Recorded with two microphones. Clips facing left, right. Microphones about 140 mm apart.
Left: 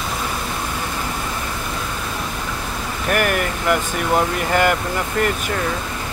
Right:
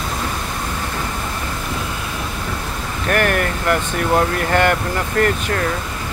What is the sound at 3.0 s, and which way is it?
Speech, 10° left (ahead or behind).